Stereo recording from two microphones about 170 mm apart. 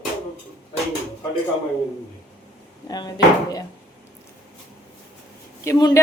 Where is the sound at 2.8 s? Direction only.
25° left (ahead or behind).